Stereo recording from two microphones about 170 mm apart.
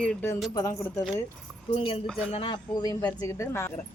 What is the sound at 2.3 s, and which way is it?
Speech, 30° left (ahead or behind).